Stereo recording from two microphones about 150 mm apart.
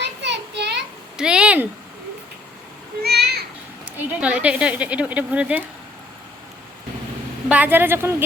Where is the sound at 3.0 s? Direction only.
90° right.